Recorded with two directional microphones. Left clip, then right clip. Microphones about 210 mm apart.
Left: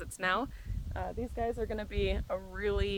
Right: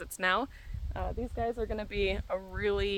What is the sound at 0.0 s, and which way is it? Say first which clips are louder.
Speech: right 2 dB; 20° right (ahead or behind).